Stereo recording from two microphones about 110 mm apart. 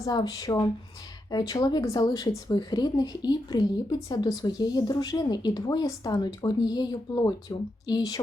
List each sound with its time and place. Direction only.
0.0 s speech: 35° left (ahead or behind)